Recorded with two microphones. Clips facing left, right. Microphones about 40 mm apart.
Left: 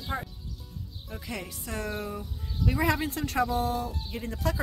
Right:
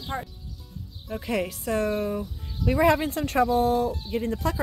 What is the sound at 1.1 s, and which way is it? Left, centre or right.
Speech, centre.